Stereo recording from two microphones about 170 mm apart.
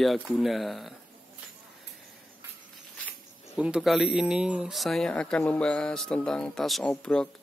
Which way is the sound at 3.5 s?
5° right (ahead or behind).